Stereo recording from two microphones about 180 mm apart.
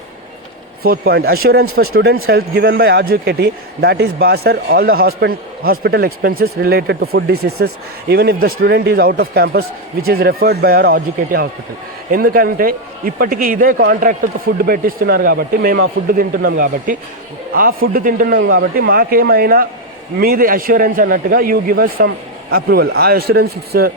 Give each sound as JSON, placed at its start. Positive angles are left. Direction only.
{"t": 0.9, "sound": "a man's voice", "side_deg": -60}